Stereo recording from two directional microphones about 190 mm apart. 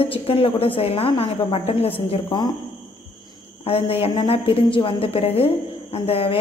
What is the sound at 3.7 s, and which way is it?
A woman's voice, 30° left (ahead or behind).